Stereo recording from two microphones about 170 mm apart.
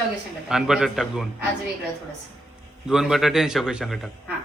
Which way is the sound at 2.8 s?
5° right (ahead or behind).